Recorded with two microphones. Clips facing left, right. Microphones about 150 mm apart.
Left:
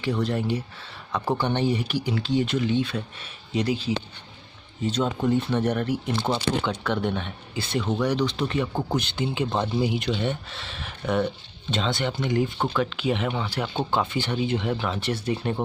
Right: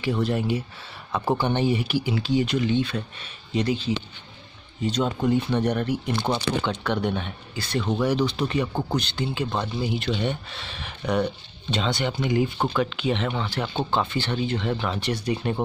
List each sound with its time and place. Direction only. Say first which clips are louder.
0.0 s speech: right 1 dB; 10° right (ahead or behind)
8.8 s speech: even; 20° left (ahead or behind)
10.1 s speech: even; centre (ahead or behind)